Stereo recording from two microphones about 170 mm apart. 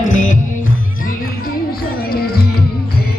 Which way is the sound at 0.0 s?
45° left (ahead or behind).